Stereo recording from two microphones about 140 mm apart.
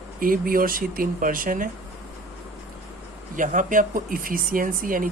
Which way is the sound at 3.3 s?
65° right (ahead or behind).